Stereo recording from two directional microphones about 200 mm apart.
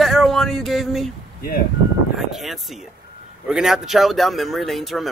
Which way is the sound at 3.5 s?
Centre (ahead or behind).